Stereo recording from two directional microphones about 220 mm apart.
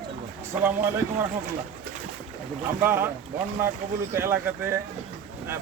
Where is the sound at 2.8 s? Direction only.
10° right (ahead or behind).